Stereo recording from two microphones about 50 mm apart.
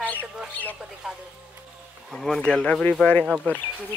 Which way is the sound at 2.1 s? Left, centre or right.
Centre.